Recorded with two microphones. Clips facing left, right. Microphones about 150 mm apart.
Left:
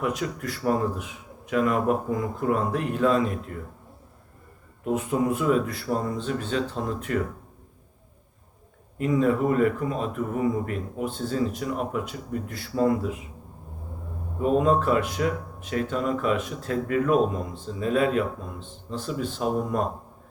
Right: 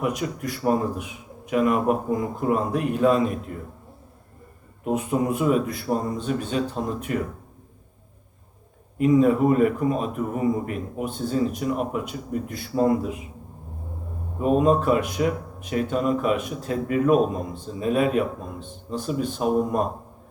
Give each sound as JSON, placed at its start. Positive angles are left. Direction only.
{"t": 0.0, "sound": "speech", "side_deg": -15}
{"t": 4.9, "sound": "speech", "side_deg": -15}
{"t": 9.0, "sound": "speech", "side_deg": -15}
{"t": 14.4, "sound": "speech", "side_deg": -15}